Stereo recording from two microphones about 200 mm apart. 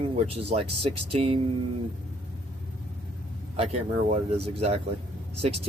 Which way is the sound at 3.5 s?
30° right (ahead or behind).